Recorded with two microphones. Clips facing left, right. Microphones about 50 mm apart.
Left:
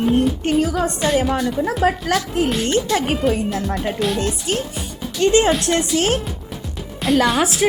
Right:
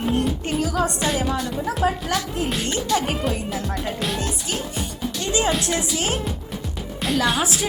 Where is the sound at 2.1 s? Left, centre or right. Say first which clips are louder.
Left 5 dB; left.